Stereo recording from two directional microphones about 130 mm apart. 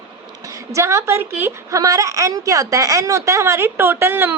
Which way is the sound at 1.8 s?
25° right (ahead or behind).